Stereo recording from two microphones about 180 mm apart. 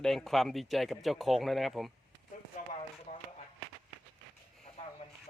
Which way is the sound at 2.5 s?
40° left (ahead or behind).